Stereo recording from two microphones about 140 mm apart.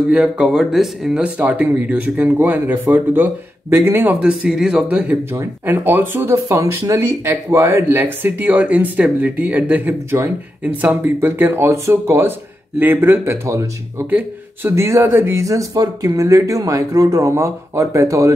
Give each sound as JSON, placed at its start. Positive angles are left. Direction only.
{"t": 0.1, "sound": "speech", "side_deg": -5}
{"t": 5.3, "sound": "speech", "side_deg": -20}